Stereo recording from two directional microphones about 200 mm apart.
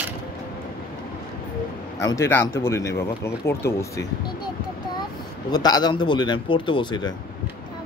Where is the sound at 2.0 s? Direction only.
15° left (ahead or behind).